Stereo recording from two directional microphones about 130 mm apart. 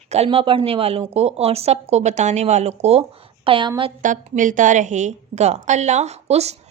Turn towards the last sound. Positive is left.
turn(degrees=-55)  # may be behind; listen again after turning